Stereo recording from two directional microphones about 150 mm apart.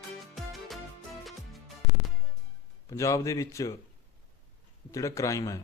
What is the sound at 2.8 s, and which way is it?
Speech, 20° left (ahead or behind).